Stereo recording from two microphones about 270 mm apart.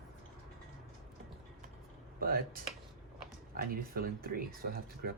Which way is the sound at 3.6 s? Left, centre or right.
Right.